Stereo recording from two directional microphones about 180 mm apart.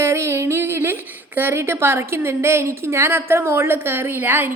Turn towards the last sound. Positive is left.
turn(degrees=-10)  # may be behind; listen again after turning